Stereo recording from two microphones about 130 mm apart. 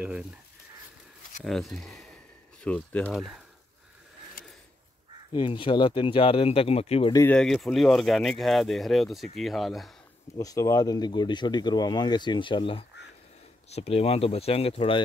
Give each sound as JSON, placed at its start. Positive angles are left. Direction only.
{"t": 1.4, "sound": "speech", "side_deg": 0}
{"t": 3.1, "sound": "speech", "side_deg": 0}
{"t": 5.3, "sound": "speech", "side_deg": 40}
{"t": 7.2, "sound": "speech", "side_deg": 5}
{"t": 10.3, "sound": "speech", "side_deg": 25}
{"t": 13.7, "sound": "speech", "side_deg": 55}